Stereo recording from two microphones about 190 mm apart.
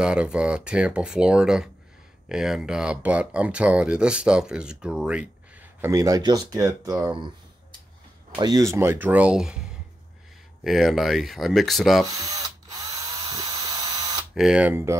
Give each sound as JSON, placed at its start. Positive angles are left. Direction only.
{"t": 0.0, "sound": "speech", "side_deg": -5}
{"t": 8.4, "sound": "speech", "side_deg": -20}
{"t": 12.1, "sound": "drill", "side_deg": -20}
{"t": 14.3, "sound": "speech", "side_deg": -5}